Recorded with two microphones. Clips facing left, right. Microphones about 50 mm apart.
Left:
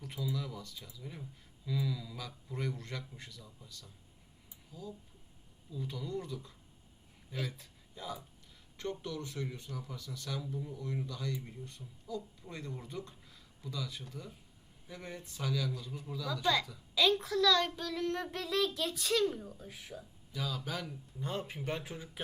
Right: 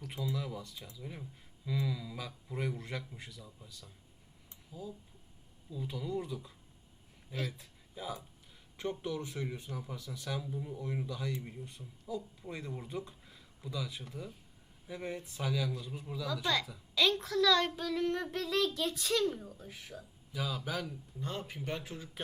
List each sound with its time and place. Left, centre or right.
0.1 s speech: centre
16.3 s a child's voice: centre
20.3 s a child's voice: centre
21.2 s speech: centre
21.4 s speech: centre